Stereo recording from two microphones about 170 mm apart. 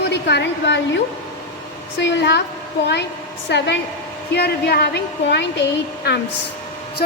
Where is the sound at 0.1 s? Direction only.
90° left.